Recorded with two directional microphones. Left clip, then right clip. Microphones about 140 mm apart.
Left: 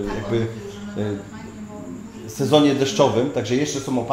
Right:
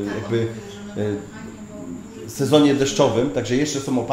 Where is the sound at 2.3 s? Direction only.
Centre (ahead or behind).